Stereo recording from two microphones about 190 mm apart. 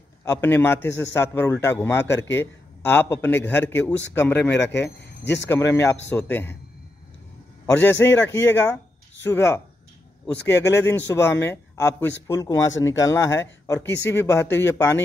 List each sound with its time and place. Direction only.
0.2 s speech: 15° left (ahead or behind)
5.2 s a man's voice: 65° left (ahead or behind)
5.5 s speech: 15° left (ahead or behind)
7.6 s speech: 15° left (ahead or behind)
10.7 s speech: 15° left (ahead or behind)